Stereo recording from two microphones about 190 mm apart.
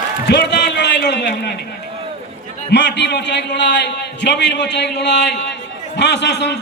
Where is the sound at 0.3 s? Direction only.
65° left (ahead or behind).